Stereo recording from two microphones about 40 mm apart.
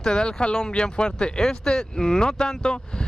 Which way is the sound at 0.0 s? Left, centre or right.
Centre.